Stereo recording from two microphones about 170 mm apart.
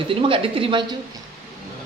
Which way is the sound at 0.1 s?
30° right (ahead or behind).